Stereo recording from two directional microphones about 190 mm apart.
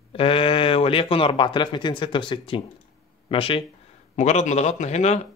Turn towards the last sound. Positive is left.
turn(degrees=35)  # may be behind; listen again after turning